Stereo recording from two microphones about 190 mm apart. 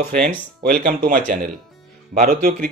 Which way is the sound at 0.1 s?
5° left (ahead or behind).